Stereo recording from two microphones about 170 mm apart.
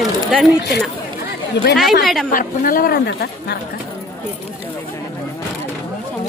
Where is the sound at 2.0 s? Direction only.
Centre (ahead or behind).